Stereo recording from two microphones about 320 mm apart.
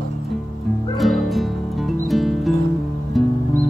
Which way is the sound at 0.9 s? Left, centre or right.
Centre.